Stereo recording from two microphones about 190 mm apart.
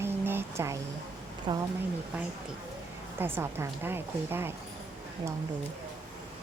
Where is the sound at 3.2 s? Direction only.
10° right (ahead or behind).